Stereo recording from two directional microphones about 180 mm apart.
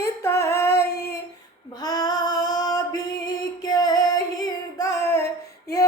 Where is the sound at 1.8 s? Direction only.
20° left (ahead or behind).